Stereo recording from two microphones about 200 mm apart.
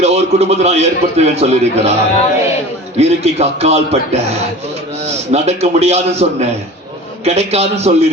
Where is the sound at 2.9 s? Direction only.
30° right (ahead or behind).